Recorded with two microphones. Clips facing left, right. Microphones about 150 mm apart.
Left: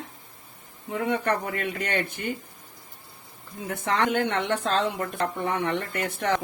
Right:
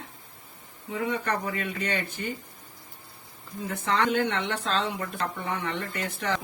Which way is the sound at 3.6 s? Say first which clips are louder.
Left 1 dB; 50° left (ahead or behind).